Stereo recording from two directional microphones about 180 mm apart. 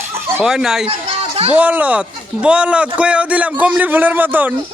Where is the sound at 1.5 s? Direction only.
10° right (ahead or behind).